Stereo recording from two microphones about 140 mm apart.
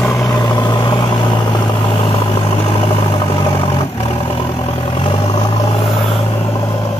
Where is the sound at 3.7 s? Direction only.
40° left (ahead or behind).